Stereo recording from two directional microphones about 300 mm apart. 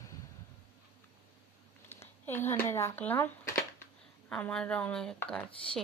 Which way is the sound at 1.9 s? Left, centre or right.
Centre.